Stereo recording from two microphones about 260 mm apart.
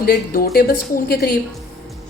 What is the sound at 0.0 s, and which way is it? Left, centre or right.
A woman's voice, left.